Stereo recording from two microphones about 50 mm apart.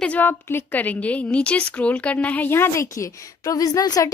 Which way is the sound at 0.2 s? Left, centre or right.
Left.